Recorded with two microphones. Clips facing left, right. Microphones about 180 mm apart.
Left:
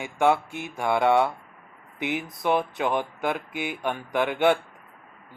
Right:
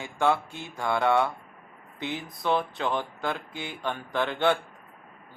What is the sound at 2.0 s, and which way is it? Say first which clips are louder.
Speech: left 5 dB; 15° left (ahead or behind).